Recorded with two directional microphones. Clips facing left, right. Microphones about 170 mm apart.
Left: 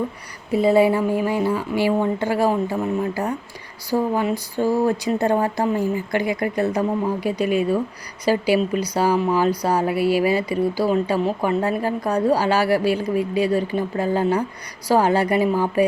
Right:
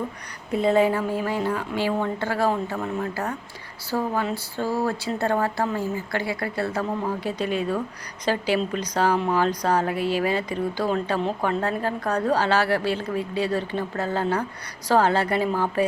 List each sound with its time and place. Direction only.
0.5 s speech: 5° left (ahead or behind)
3.8 s speech: 15° left (ahead or behind)